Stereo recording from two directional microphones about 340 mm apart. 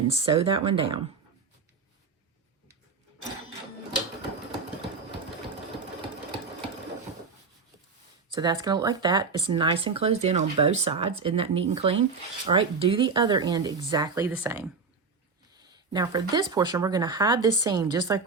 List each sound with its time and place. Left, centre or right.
0.1 s speech: centre
8.3 s speech: centre
15.9 s speech: centre